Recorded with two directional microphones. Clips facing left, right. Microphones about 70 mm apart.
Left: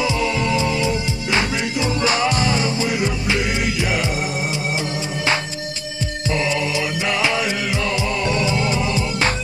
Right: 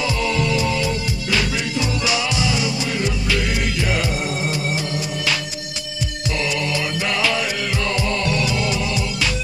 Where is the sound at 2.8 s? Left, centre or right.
Left.